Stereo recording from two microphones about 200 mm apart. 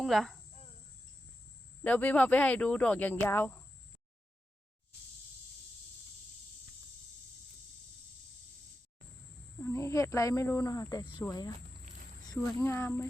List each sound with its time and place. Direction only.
0.0 s speech: centre (ahead or behind)
1.8 s speech: 10° left (ahead or behind)
9.6 s speech: 15° left (ahead or behind)